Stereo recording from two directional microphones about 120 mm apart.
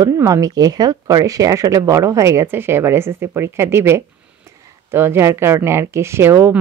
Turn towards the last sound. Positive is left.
turn(degrees=-20)  # may be behind; listen again after turning